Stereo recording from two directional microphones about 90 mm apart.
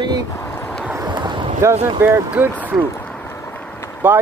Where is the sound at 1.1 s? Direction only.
55° right (ahead or behind).